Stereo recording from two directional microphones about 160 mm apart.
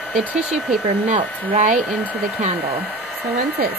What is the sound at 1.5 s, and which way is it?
Speech, 50° right (ahead or behind).